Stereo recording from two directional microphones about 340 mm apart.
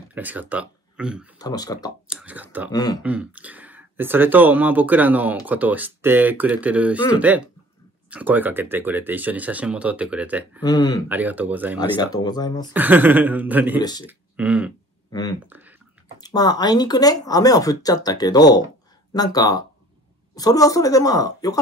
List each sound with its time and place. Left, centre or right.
0.1 s speech: centre
1.4 s speech: centre
2.0 s speech: centre
2.7 s speech: centre
3.0 s speech: centre
10.6 s speech: centre
11.1 s speech: centre
12.0 s speech: centre
12.7 s speech: centre
13.7 s speech: centre
14.0 s speech: centre
15.0 s speech: centre
15.4 s speech: centre
16.2 s speech: centre